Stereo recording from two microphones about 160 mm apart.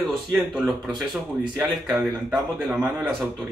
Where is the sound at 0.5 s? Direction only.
5° right (ahead or behind).